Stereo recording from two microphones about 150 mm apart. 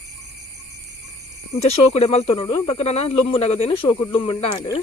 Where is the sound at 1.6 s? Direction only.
45° left (ahead or behind).